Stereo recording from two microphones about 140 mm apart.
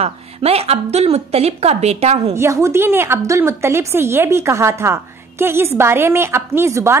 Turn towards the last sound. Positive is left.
turn(degrees=-20)  # may be behind; listen again after turning